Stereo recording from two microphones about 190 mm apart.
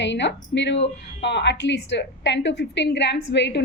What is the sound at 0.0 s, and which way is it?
A woman's voice, 70° left (ahead or behind).